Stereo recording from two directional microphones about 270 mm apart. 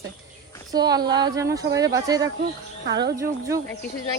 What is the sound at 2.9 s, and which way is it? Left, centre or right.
Speech, right.